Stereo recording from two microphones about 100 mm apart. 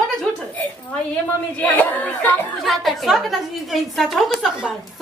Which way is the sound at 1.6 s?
15° left (ahead or behind).